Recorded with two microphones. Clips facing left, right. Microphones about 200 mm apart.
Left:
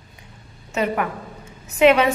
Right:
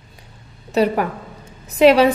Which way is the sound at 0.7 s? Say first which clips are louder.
Right 5 dB; 35° right (ahead or behind).